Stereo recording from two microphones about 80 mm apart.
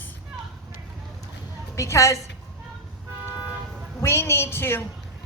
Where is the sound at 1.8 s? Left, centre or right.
Left.